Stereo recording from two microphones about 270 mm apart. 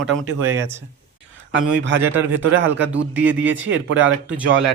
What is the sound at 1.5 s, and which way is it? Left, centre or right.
Speech, right.